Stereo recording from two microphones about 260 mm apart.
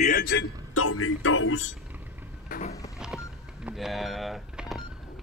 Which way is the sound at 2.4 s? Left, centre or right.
Left.